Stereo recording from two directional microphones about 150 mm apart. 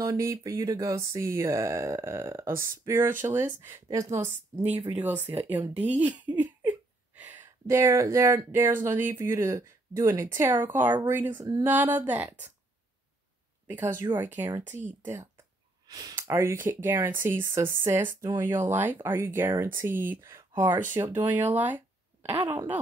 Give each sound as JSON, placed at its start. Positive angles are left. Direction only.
{"t": 0.0, "sound": "a sound", "side_deg": -20}
{"t": 4.9, "sound": "speech", "side_deg": -10}
{"t": 6.2, "sound": "laughter", "side_deg": -10}
{"t": 7.2, "sound": "a sound", "side_deg": -15}
{"t": 10.6, "sound": "speech", "side_deg": -15}
{"t": 14.1, "sound": "speech", "side_deg": -15}
{"t": 15.9, "sound": "speech", "side_deg": -25}